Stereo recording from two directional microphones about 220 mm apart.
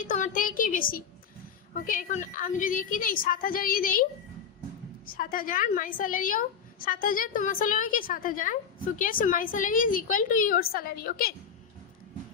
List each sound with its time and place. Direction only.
0.0 s a woman's voice: 35° left (ahead or behind)
5.1 s a woman's voice: 40° left (ahead or behind)